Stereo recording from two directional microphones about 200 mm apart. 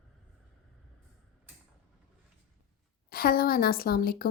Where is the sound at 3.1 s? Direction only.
50° left (ahead or behind).